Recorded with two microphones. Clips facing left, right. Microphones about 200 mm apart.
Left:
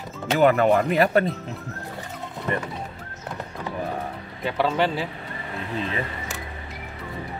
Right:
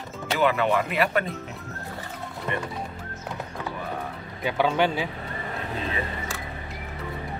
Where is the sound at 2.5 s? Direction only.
40° left (ahead or behind).